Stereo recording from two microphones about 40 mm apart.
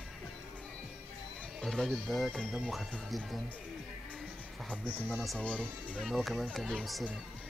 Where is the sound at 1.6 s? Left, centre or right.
Centre.